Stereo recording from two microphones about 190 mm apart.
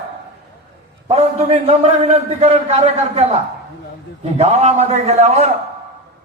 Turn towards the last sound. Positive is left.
turn(degrees=-35)  # may be behind; listen again after turning